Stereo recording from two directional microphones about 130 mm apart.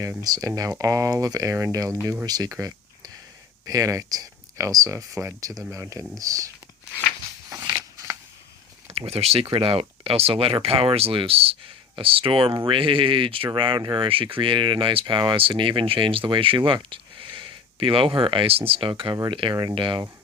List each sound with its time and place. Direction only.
0.0 s speech: 25° right (ahead or behind)
7.6 s a sound: 25° right (ahead or behind)
8.9 s speech: 50° right (ahead or behind)